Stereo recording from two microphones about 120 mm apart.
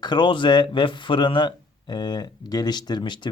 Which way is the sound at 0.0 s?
40° left (ahead or behind).